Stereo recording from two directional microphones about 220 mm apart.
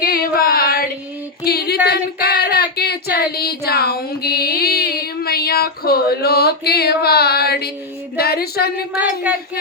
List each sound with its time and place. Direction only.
0.0 s female singing: 45° left (ahead or behind)
8.9 s speech: 5° right (ahead or behind)